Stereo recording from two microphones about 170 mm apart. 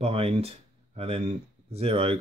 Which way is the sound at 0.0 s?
35° right (ahead or behind).